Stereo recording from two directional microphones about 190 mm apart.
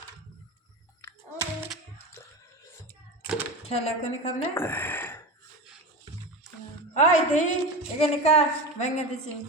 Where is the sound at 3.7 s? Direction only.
35° left (ahead or behind).